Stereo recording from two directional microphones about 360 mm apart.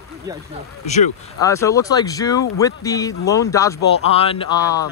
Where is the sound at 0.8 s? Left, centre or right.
Centre.